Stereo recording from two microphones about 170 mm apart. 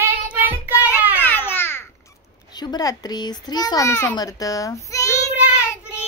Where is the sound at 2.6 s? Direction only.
25° left (ahead or behind).